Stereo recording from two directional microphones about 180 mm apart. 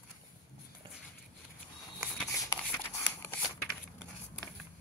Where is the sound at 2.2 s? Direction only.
15° left (ahead or behind).